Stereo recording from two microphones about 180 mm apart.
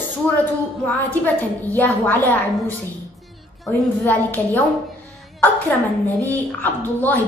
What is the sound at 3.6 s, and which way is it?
A woman's voice, 5° left (ahead or behind).